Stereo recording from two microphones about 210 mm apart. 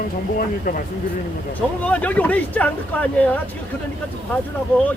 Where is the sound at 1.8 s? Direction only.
5° left (ahead or behind).